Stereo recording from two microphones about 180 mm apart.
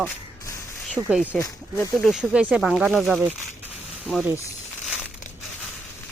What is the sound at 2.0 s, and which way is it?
A woman's voice, 5° right (ahead or behind).